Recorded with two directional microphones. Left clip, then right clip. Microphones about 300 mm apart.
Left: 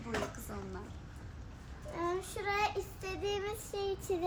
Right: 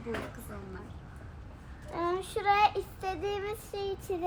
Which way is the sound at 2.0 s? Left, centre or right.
Centre.